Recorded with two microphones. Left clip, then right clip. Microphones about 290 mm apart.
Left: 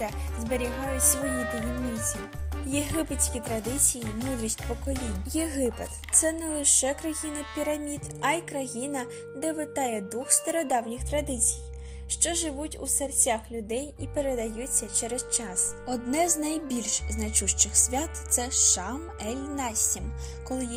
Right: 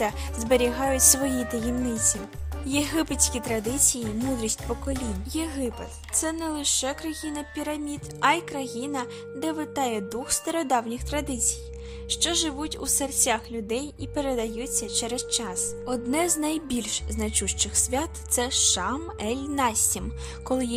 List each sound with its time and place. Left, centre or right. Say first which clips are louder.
0.0 s a woman's voice: right 6 dB; right
0.6 s speech: right 7 dB; centre
2.6 s speech: right 4 dB; centre
3.5 s speech: right 4 dB; centre
4.4 s speech: right 3 dB; centre
4.9 s speech: even; centre